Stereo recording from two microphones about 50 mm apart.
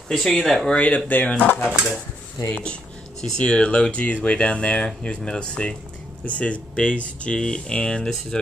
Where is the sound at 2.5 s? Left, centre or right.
Left.